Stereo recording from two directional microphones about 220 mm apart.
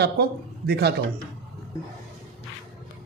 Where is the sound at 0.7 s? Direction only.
45° right (ahead or behind).